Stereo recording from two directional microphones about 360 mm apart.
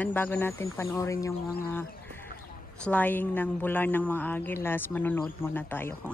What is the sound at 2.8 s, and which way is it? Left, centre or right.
A woman's voice, centre.